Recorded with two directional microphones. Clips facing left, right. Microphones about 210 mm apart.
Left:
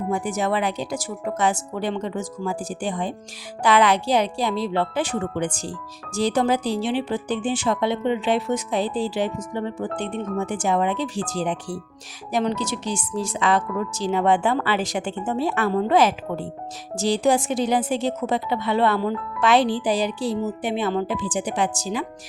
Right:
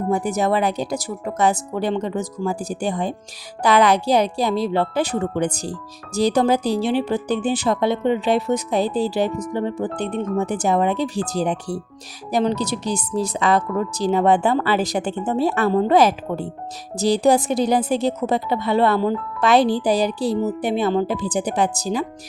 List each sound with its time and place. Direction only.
0.1 s a woman's voice: 40° right (ahead or behind)